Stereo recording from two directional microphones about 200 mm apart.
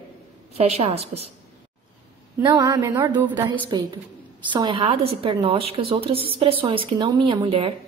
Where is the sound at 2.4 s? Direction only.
15° right (ahead or behind).